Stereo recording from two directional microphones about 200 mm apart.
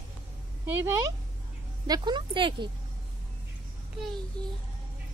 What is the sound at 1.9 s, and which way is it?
Speech, 25° right (ahead or behind).